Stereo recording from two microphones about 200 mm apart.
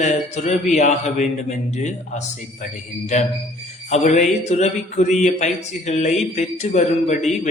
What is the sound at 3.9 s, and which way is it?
Speech, 35° left (ahead or behind).